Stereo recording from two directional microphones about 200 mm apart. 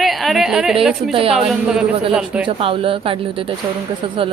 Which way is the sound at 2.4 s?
25° right (ahead or behind).